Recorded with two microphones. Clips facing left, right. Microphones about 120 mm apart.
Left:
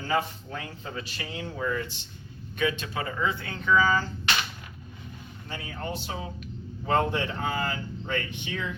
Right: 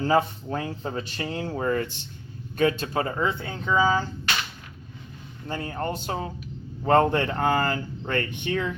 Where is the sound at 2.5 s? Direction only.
40° right (ahead or behind).